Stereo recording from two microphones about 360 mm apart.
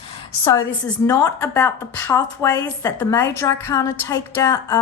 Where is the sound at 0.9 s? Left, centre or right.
Centre.